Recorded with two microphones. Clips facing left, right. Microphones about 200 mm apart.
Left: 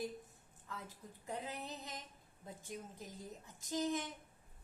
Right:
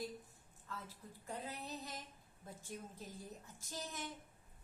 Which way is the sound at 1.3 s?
20° left (ahead or behind).